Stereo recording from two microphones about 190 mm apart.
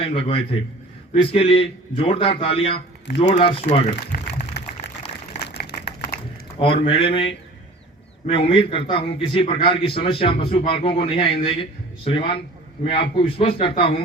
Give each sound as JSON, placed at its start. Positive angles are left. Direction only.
{"t": 0.0, "sound": "a man's voice", "side_deg": 30}
{"t": 4.8, "sound": "a sound", "side_deg": 65}
{"t": 6.6, "sound": "a man's voice", "side_deg": 30}